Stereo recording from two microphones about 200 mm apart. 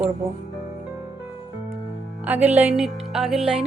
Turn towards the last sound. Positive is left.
turn(degrees=0)  # may be behind; listen again after turning